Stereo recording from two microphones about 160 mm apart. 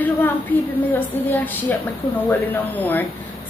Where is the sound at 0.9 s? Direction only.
10° left (ahead or behind).